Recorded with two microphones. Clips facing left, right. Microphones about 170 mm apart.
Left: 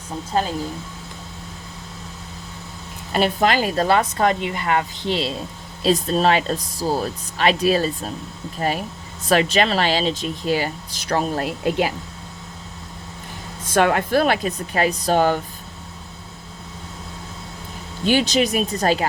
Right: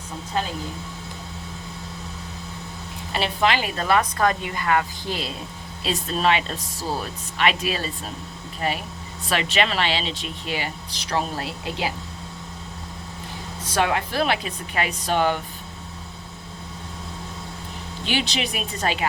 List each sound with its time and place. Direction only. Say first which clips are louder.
3.1 s a woman's voice: left 4 dB; 45° left (ahead or behind); by 5.3 s 25° left (ahead or behind)
5.8 s speech: left 5 dB; 40° left (ahead or behind)
13.7 s speech: left 5 dB; 50° left (ahead or behind)
18.0 s speech: left 8 dB; 45° left (ahead or behind)